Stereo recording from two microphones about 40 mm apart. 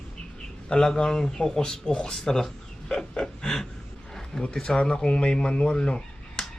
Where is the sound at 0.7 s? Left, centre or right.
Left.